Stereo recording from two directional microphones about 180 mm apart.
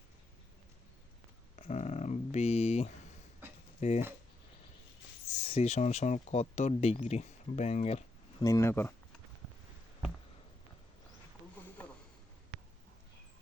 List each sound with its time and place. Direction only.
1.5 s a sound: 40° left (ahead or behind)
3.8 s speech: 40° left (ahead or behind)
5.4 s speech: 35° left (ahead or behind)
8.4 s speech: 20° left (ahead or behind)